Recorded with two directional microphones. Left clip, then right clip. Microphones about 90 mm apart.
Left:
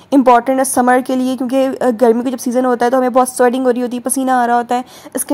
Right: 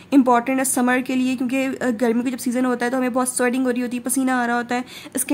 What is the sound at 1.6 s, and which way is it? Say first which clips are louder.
A woman's voice: left 11 dB; 35° left (ahead or behind).